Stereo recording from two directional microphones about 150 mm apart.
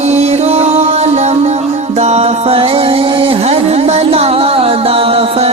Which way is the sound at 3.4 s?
45° right (ahead or behind).